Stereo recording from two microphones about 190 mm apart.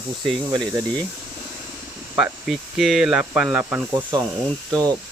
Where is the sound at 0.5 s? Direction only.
20° right (ahead or behind).